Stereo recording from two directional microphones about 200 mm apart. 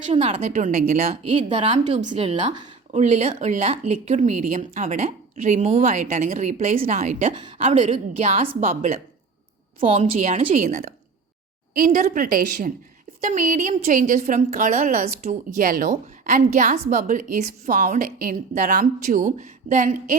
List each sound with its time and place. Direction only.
0.1 s speech: 30° right (ahead or behind)
11.7 s a woman's voice: 45° right (ahead or behind)